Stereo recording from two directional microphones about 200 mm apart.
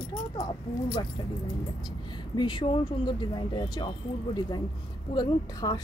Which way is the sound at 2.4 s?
25° left (ahead or behind).